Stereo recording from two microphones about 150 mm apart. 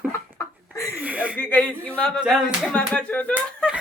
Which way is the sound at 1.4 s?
10° left (ahead or behind).